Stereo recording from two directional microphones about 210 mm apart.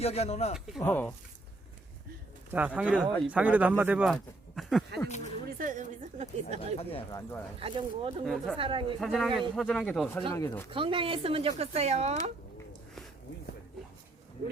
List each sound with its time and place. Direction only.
0.0 s speech: 30° left (ahead or behind)
0.8 s speech: 10° left (ahead or behind)
2.5 s speech: 10° right (ahead or behind)
5.0 s speech: 35° left (ahead or behind)
5.5 s a woman's voice: 40° right (ahead or behind)
7.1 s speech: 15° left (ahead or behind)
7.6 s speech: 25° right (ahead or behind)
8.2 s speech: centre (ahead or behind)
8.5 s speech: 25° right (ahead or behind)
9.0 s speech: centre (ahead or behind)
10.7 s speech: 25° right (ahead or behind)